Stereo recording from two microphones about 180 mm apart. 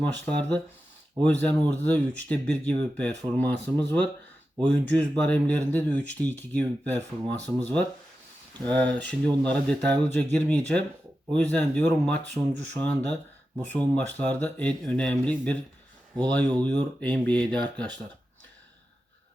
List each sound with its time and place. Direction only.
0.3 s speech: 5° left (ahead or behind)
12.2 s speech: 80° right
12.8 s speech: 5° left (ahead or behind)